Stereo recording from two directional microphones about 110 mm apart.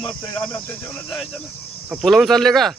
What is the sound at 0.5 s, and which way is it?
Speech, 20° left (ahead or behind).